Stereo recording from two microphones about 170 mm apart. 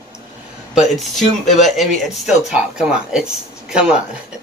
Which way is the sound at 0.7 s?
Centre (ahead or behind).